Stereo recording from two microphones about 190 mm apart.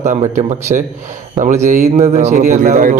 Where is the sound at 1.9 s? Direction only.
35° right (ahead or behind).